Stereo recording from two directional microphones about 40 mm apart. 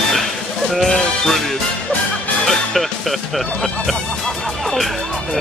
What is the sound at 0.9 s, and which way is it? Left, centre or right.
Speech, centre.